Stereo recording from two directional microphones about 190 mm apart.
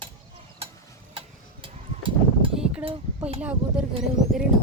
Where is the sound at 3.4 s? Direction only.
5° right (ahead or behind).